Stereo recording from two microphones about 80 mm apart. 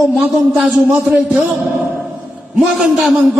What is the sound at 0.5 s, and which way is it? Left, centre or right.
Speech, centre.